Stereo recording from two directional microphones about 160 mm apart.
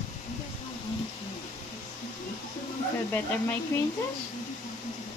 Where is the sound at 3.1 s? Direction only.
15° left (ahead or behind).